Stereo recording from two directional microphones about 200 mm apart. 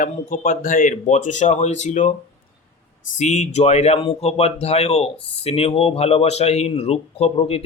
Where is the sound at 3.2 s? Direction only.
35° left (ahead or behind).